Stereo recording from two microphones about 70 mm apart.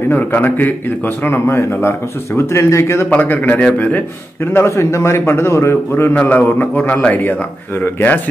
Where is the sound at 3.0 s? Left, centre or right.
Left.